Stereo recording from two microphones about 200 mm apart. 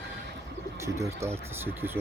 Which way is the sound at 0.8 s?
15° right (ahead or behind).